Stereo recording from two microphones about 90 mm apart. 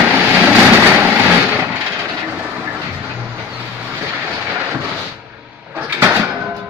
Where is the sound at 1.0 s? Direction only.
15° right (ahead or behind).